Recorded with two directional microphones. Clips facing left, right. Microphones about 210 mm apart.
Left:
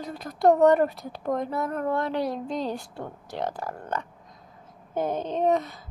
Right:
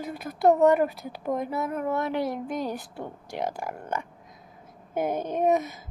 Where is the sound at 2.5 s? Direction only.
20° left (ahead or behind).